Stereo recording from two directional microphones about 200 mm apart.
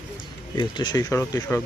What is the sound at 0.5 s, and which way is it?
Speech, 20° left (ahead or behind).